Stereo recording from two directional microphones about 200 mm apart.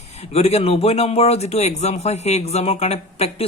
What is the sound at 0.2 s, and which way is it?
Speech, 30° left (ahead or behind).